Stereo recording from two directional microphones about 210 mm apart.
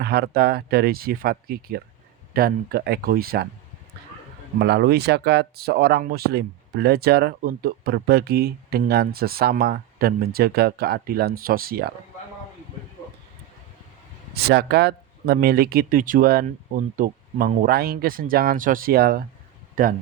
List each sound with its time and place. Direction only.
0.0 s speech: 50° right (ahead or behind)
4.6 s speech: 50° right (ahead or behind)
14.3 s speech: 50° right (ahead or behind)